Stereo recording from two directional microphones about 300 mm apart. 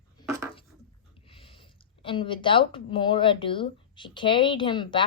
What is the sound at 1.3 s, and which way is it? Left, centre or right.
Speech, centre.